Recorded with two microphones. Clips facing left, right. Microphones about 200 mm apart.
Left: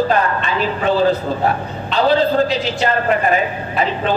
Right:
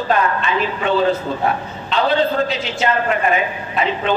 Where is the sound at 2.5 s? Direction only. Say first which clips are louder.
Left 2 dB; 35° left (ahead or behind).